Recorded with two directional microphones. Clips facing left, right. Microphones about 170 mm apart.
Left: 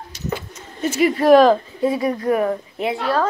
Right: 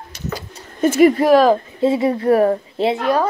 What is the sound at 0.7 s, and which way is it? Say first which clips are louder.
Speech: right 6 dB; 50° right (ahead or behind).